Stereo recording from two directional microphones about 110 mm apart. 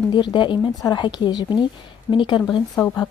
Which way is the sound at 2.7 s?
25° left (ahead or behind).